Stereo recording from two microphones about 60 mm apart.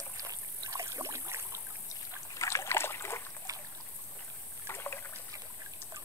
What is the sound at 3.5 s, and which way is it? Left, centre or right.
Boat, right.